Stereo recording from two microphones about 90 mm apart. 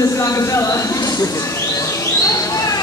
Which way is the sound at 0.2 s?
35° left (ahead or behind).